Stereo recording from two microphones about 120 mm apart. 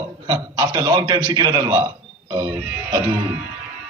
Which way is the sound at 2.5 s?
10° right (ahead or behind).